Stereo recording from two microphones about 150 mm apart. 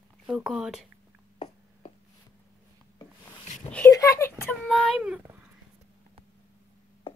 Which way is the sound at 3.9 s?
20° left (ahead or behind).